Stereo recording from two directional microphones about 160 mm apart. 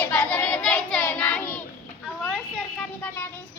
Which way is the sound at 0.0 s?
15° left (ahead or behind).